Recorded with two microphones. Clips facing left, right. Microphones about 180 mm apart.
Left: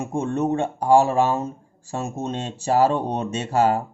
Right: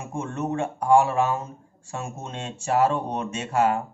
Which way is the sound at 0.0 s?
35° left (ahead or behind).